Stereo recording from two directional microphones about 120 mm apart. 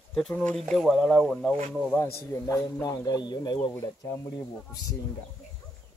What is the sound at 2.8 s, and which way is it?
Speech, 35° left (ahead or behind).